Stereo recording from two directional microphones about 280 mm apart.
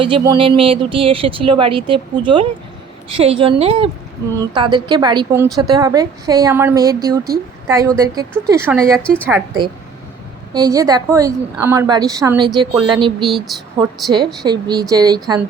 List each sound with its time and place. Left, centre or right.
0.0 s a woman's voice: centre
9.0 s speech: centre
10.5 s a woman's voice: centre
13.2 s speech: centre
14.4 s a woman's voice: centre